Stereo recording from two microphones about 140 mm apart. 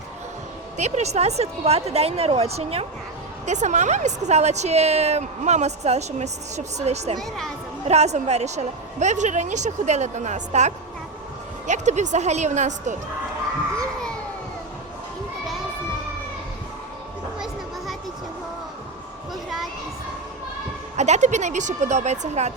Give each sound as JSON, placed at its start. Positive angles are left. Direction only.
{"t": 0.8, "sound": "a woman's voice", "side_deg": -55}
{"t": 7.2, "sound": "speech", "side_deg": 5}
{"t": 7.9, "sound": "a woman's voice", "side_deg": -50}
{"t": 13.7, "sound": "a sound", "side_deg": 5}
{"t": 19.3, "sound": "a sound", "side_deg": 0}
{"t": 20.9, "sound": "a woman's voice", "side_deg": -55}